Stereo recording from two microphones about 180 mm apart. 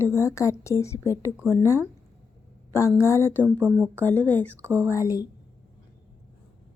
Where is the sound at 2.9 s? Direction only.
15° left (ahead or behind).